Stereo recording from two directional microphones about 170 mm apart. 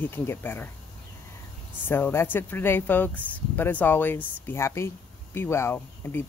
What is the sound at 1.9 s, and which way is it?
Speech, 10° left (ahead or behind).